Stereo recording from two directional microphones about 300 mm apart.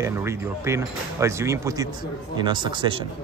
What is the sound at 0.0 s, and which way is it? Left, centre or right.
Speech, centre.